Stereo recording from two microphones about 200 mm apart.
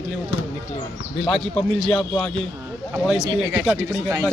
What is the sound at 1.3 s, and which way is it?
Speech, 5° left (ahead or behind).